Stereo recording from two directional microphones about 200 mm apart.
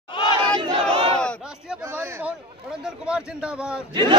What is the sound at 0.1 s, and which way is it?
Battle cry, 25° left (ahead or behind).